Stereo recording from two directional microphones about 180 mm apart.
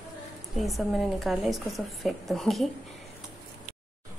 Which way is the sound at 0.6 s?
Centre (ahead or behind).